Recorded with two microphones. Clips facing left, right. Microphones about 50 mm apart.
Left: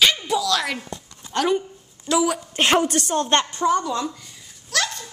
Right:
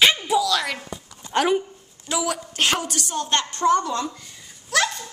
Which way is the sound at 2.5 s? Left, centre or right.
Left.